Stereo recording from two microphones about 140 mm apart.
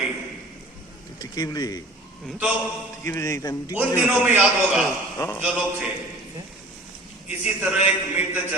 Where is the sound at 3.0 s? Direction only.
20° left (ahead or behind).